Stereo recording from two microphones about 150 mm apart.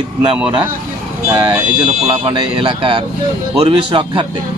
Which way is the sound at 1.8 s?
35° right (ahead or behind).